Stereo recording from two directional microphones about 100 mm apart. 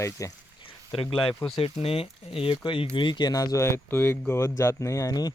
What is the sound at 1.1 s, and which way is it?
Speech, 55° left (ahead or behind).